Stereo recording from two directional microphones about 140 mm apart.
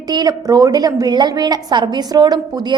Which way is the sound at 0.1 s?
30° right (ahead or behind).